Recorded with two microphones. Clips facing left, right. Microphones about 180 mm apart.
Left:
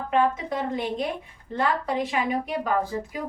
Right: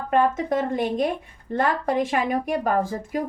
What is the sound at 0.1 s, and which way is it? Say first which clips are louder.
Speech: right 3 dB; 45° right (ahead or behind).